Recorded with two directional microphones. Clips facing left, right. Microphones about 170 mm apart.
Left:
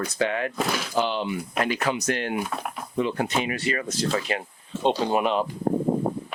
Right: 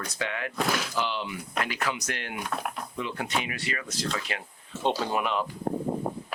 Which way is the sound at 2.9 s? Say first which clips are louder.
Left 8 dB; 35° left (ahead or behind).